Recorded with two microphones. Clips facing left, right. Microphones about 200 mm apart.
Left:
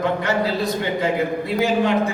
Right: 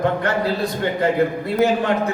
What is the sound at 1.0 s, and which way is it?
Speech, 55° right (ahead or behind).